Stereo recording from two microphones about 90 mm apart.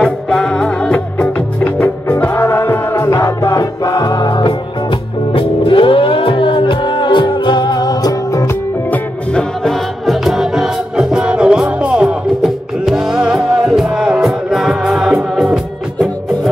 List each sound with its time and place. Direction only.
0.0 s music: 5° left (ahead or behind)
1.6 s music: 25° left (ahead or behind); by 4.6 s 55° left (ahead or behind)
5.3 s music: 80° left; by 8.5 s 45° left (ahead or behind)
9.7 s music: centre (ahead or behind)